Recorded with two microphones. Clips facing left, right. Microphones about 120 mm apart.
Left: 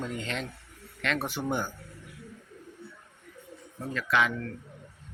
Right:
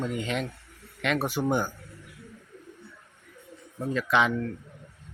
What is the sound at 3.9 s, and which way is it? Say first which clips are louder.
Speech: right 3 dB; 20° right (ahead or behind).